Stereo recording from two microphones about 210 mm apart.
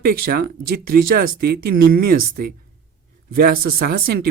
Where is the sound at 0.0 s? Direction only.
45° right (ahead or behind).